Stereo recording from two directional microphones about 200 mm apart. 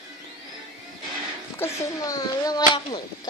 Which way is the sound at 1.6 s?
15° left (ahead or behind).